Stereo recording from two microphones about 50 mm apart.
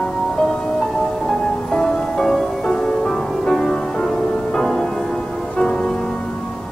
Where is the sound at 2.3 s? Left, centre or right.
Centre.